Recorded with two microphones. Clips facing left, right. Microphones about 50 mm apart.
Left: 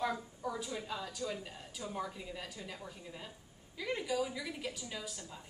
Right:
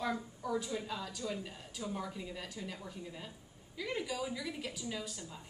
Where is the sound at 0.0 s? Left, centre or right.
Centre.